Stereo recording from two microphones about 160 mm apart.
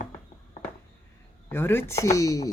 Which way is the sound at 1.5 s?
15° left (ahead or behind).